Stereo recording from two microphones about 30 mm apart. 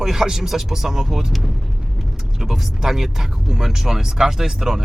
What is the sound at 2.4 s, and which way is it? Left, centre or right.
Speech, centre.